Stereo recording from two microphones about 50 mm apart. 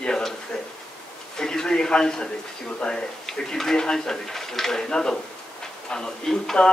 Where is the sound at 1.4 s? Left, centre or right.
Centre.